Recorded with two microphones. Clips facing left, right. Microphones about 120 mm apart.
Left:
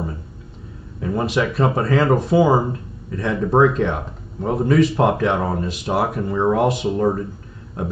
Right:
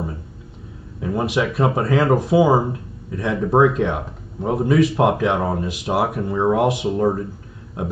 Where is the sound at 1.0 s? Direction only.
5° right (ahead or behind).